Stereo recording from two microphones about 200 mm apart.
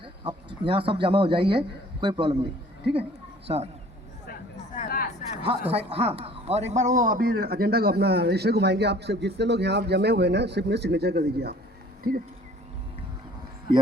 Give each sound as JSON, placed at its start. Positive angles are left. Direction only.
{"t": 0.0, "sound": "speech", "side_deg": -25}
{"t": 3.4, "sound": "speech", "side_deg": -30}
{"t": 4.7, "sound": "a sound", "side_deg": 40}
{"t": 5.4, "sound": "a man's voice", "side_deg": -30}